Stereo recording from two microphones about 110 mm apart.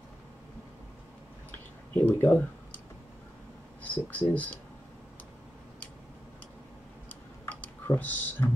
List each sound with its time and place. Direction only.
2.0 s speech: 15° left (ahead or behind)
3.8 s speech: 15° left (ahead or behind)
7.1 s typing: 15° left (ahead or behind)